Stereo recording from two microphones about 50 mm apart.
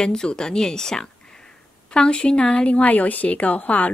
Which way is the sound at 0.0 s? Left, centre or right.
Centre.